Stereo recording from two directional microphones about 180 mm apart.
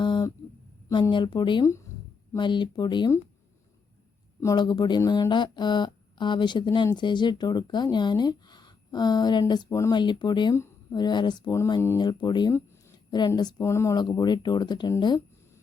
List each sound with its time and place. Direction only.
0.0 s a sound: 25° left (ahead or behind)
0.9 s speech: 20° left (ahead or behind)
4.4 s speech: 20° left (ahead or behind)